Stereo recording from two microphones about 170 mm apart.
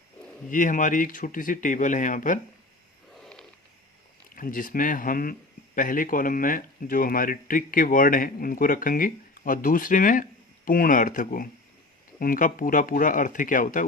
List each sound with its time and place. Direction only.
0.5 s speech: 50° left (ahead or behind)
3.2 s a sound: 5° left (ahead or behind)
4.4 s speech: 55° left (ahead or behind)